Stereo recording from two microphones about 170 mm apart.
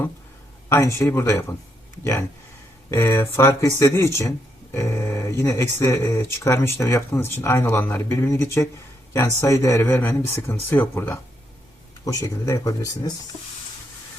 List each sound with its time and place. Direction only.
0.7 s speech: 15° left (ahead or behind)
2.9 s speech: 15° left (ahead or behind)